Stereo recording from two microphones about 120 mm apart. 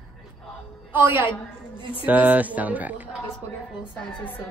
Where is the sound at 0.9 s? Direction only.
15° right (ahead or behind).